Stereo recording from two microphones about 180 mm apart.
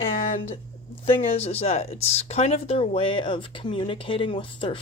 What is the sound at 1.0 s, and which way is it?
Speech, 35° left (ahead or behind).